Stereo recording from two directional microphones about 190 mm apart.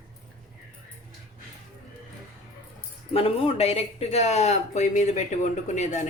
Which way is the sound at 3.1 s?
30° left (ahead or behind).